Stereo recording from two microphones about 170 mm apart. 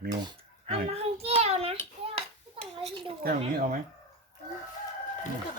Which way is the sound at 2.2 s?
30° right (ahead or behind).